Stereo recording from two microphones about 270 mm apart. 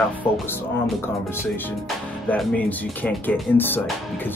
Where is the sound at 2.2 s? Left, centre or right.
Centre.